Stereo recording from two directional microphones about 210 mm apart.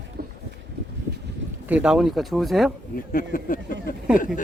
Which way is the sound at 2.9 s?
45° left (ahead or behind).